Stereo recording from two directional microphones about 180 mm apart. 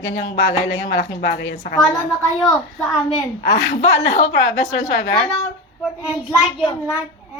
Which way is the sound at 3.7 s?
35° left (ahead or behind).